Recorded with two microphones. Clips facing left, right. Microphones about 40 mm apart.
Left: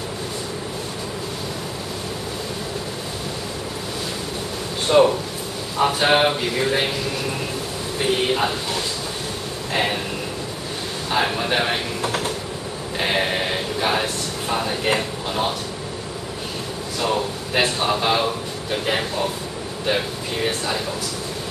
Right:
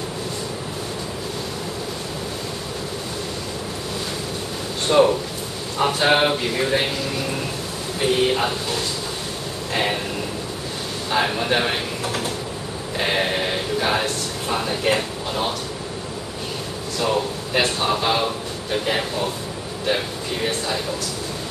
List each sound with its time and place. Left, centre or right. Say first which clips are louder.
4.8 s speech: left 1 dB; centre
8.0 s speech: right 1 dB; centre
9.7 s speech: even; centre
11.1 s speech: even; centre
12.0 s speech: left 2 dB; centre
12.9 s a sound: even; centre
17.0 s speech: right 1 dB; centre
20.4 s speech: even; centre